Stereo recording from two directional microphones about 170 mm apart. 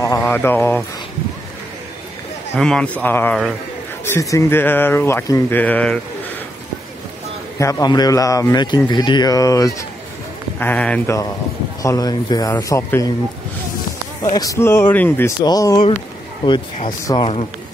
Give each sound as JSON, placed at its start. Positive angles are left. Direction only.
{"t": 0.0, "sound": "a sound", "side_deg": 15}
{"t": 2.5, "sound": "speech", "side_deg": 5}
{"t": 7.5, "sound": "a man's voice", "side_deg": 20}
{"t": 11.8, "sound": "a man's voice", "side_deg": 20}
{"t": 14.3, "sound": "a man's voice", "side_deg": 20}
{"t": 17.1, "sound": "speech", "side_deg": 35}